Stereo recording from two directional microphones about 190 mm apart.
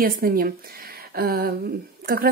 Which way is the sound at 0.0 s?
50° right (ahead or behind).